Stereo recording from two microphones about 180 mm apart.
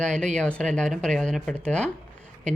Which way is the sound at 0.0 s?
5° left (ahead or behind).